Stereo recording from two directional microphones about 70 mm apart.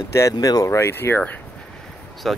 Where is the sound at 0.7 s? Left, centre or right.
Left.